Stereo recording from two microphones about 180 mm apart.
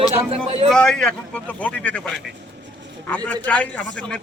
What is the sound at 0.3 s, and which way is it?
Speech, 30° right (ahead or behind).